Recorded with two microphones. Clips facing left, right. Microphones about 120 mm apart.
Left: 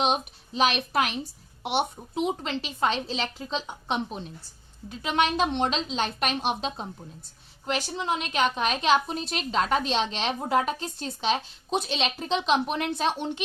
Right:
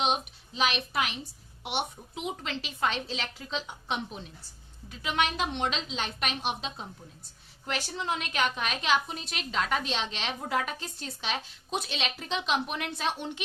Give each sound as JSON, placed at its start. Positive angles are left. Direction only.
{"t": 0.0, "sound": "a woman's voice", "side_deg": 40}
{"t": 7.6, "sound": "a woman's voice", "side_deg": 20}